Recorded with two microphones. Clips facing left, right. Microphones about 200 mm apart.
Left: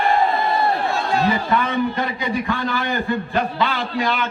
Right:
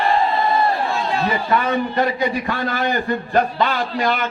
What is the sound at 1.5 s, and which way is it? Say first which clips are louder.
A man's voice: right 1 dB; 50° right (ahead or behind).